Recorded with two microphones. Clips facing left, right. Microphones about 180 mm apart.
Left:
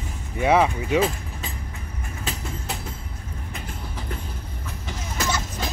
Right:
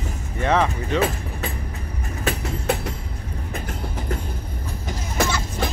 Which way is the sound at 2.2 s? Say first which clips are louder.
Right 9 dB; 65° right (ahead or behind).